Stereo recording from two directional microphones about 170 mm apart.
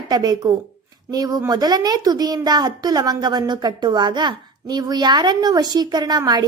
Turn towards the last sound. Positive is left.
turn(degrees=-25)  # may be behind; listen again after turning